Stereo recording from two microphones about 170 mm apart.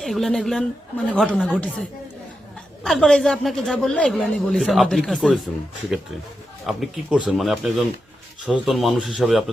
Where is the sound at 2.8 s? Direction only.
Centre (ahead or behind).